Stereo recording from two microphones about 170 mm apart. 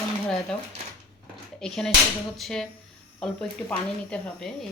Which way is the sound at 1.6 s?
Centre (ahead or behind).